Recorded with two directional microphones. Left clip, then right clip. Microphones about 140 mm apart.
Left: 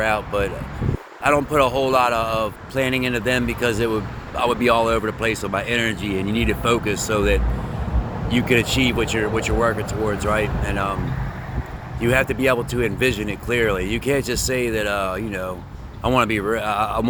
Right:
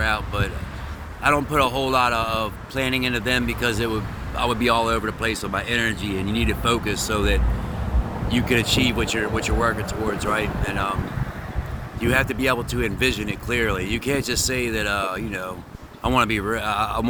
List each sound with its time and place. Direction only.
0.0 s speech: 25° right (ahead or behind)
11.9 s speech: 30° right (ahead or behind)